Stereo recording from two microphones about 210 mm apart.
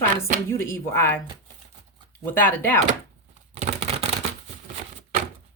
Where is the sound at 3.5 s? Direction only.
30° right (ahead or behind).